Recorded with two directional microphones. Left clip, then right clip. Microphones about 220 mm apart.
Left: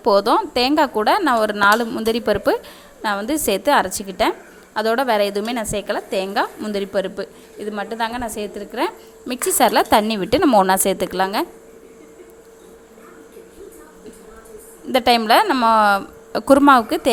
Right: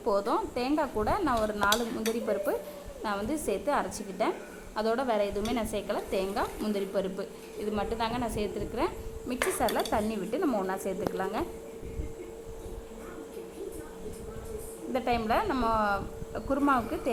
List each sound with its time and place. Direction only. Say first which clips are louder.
0.0 s a woman's voice: left 13 dB; 35° left (ahead or behind)
9.6 s a woman's voice: left 17 dB; 50° left (ahead or behind)
10.6 s a woman's voice: left 17 dB; 60° left (ahead or behind)
10.8 s a woman's voice: left 12 dB; 45° left (ahead or behind)
14.9 s a woman's voice: left 14 dB; 45° left (ahead or behind)